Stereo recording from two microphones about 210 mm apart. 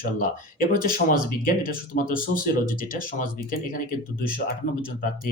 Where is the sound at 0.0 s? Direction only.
45° left (ahead or behind).